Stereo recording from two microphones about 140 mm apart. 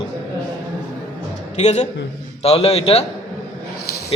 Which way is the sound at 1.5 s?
55° left (ahead or behind).